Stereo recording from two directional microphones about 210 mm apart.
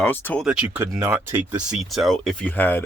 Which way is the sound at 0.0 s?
10° left (ahead or behind).